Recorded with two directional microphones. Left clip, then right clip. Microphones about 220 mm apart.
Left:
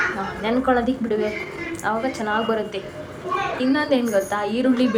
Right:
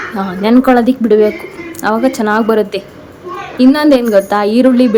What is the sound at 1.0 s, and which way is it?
Speech, 30° right (ahead or behind).